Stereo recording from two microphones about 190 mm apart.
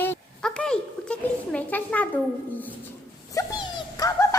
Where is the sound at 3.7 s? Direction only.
20° left (ahead or behind).